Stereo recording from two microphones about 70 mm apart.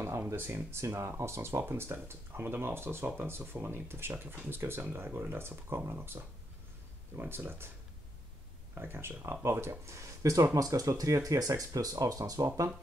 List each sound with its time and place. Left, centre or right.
0.3 s speech: right
8.7 s speech: right